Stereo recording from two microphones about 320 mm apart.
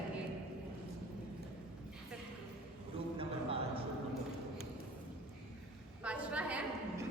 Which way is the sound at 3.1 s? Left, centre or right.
Centre.